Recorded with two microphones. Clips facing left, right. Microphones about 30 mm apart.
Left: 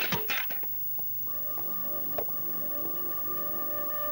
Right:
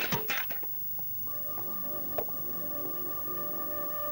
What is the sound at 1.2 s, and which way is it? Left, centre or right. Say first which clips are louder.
Music: even; centre.